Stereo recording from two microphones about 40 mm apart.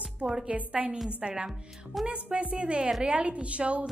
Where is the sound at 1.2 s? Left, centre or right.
Right.